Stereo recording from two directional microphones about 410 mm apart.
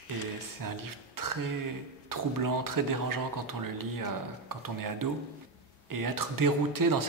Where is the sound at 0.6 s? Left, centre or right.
Right.